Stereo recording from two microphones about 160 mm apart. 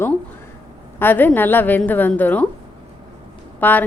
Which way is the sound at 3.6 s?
10° left (ahead or behind).